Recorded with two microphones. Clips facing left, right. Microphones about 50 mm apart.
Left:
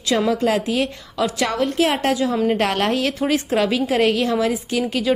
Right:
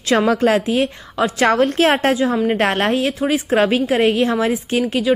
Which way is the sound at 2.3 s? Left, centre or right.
Right.